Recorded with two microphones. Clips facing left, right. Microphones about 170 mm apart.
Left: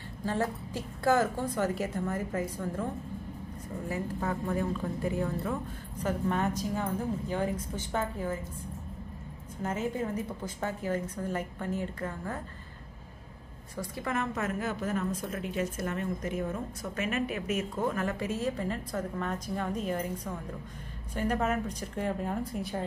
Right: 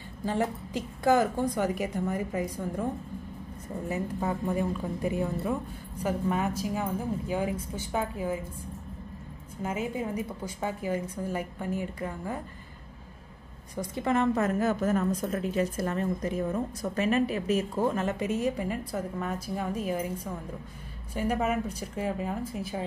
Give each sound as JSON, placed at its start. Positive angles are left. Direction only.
{"t": 0.2, "sound": "a woman's voice", "side_deg": -15}
{"t": 3.9, "sound": "a woman's voice", "side_deg": -15}
{"t": 9.6, "sound": "a woman's voice", "side_deg": -10}
{"t": 13.7, "sound": "a woman's voice", "side_deg": -25}